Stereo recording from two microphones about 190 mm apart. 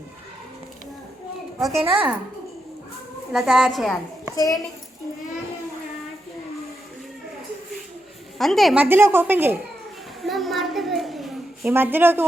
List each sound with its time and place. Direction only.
1.8 s a woman's voice: 10° right (ahead or behind)
3.3 s a woman's voice: centre (ahead or behind)
4.4 s a child's voice: 20° left (ahead or behind)
8.4 s a woman's voice: centre (ahead or behind)
10.2 s a sound: centre (ahead or behind)
11.7 s a woman's voice: 10° right (ahead or behind)